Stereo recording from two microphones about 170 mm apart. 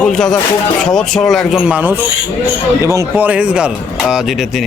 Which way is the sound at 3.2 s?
10° right (ahead or behind).